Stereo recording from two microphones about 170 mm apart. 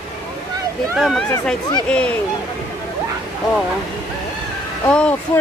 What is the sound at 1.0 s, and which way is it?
Speech, centre (ahead or behind).